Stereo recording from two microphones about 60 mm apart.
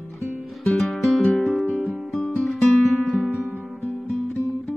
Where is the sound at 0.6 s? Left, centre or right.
Centre.